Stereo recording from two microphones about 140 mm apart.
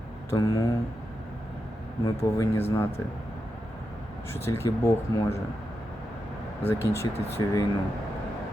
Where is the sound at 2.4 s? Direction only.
15° left (ahead or behind).